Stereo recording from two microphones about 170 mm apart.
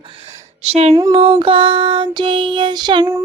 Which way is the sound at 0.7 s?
40° right (ahead or behind).